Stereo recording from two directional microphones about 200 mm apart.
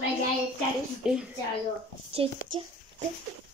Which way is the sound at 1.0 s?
5° right (ahead or behind).